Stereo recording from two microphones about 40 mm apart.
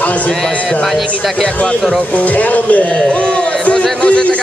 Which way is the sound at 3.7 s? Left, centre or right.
Left.